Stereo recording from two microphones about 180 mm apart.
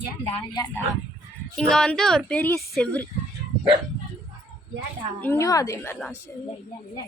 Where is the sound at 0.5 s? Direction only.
20° left (ahead or behind).